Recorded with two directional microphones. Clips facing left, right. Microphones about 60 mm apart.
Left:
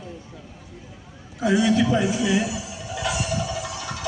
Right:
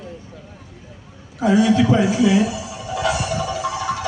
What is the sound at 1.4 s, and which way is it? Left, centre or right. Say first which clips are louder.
Speech: right 4 dB; right.